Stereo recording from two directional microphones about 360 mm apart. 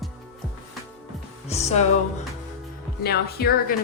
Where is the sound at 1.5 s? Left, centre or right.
Centre.